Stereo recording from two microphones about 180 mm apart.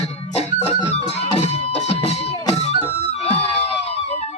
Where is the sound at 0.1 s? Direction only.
35° left (ahead or behind).